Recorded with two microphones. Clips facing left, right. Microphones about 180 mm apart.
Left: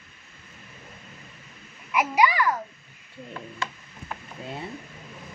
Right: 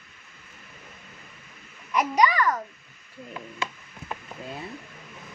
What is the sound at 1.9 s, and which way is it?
Speech, 10° left (ahead or behind).